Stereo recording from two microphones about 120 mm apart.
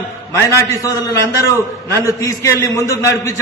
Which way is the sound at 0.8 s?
25° left (ahead or behind).